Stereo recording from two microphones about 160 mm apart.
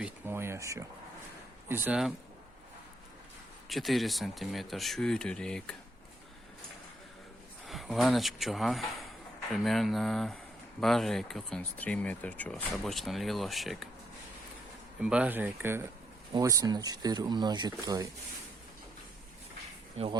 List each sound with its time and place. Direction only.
0.0 s speech: 15° right (ahead or behind)
3.7 s speech: centre (ahead or behind)
7.7 s speech: centre (ahead or behind)
15.0 s speech: 5° right (ahead or behind); by 18.1 s 25° right (ahead or behind)
20.0 s speech: 40° right (ahead or behind)